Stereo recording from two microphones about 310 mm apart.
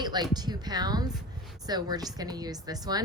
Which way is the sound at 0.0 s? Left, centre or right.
Centre.